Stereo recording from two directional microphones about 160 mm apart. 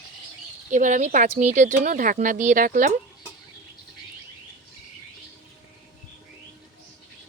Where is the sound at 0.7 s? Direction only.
50° right (ahead or behind).